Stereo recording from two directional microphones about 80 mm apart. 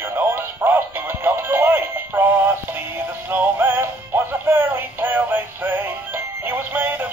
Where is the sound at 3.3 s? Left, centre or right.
Right.